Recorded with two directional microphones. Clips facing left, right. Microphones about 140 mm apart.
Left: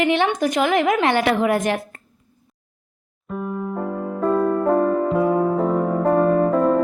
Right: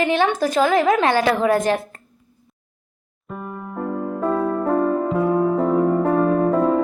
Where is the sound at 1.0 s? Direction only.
20° left (ahead or behind).